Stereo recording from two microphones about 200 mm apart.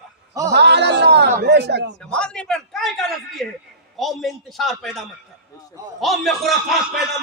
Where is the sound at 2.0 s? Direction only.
5° left (ahead or behind).